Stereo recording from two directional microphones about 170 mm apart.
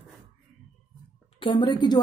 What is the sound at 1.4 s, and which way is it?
Speech, 30° left (ahead or behind).